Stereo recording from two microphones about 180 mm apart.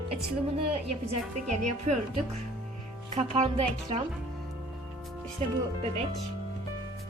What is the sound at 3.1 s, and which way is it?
Speech, 40° right (ahead or behind).